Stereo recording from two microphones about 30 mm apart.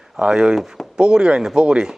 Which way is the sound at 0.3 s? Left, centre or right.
Right.